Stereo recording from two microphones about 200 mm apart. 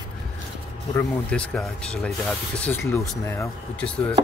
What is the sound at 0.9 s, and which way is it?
Speech, 5° left (ahead or behind).